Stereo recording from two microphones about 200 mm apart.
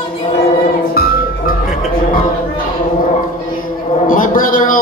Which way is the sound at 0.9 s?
50° left (ahead or behind).